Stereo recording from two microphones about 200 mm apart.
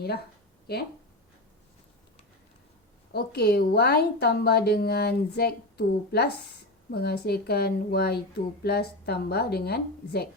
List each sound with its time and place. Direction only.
0.7 s speech: 55° left (ahead or behind)
3.1 s speech: 55° left (ahead or behind)